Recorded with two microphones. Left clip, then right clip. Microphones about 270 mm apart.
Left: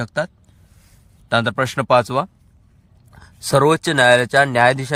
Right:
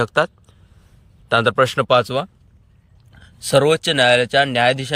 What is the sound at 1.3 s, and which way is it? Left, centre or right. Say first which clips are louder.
Speech: right 3 dB; centre.